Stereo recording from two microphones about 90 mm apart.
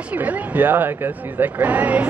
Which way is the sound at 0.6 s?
20° right (ahead or behind).